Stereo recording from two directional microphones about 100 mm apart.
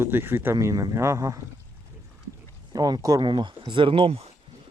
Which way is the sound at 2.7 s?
40° right (ahead or behind).